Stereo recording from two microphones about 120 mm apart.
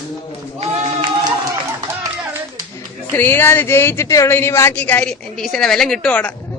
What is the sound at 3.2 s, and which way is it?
A woman's voice, 15° left (ahead or behind).